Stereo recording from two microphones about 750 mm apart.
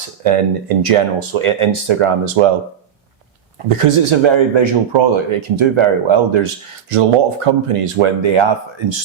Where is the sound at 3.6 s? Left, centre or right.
Right.